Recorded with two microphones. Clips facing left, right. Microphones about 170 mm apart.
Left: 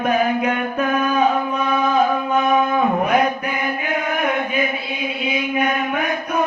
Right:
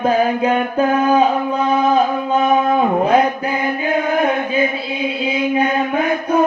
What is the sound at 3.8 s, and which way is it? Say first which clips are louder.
Chant: right 6 dB; 30° right (ahead or behind).